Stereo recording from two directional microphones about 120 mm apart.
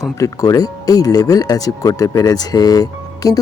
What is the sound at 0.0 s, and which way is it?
Speech, 30° left (ahead or behind).